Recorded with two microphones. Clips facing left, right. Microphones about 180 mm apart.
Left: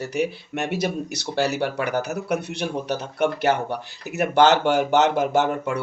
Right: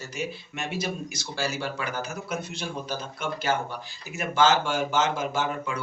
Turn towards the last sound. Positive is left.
turn(degrees=65)  # may be behind; listen again after turning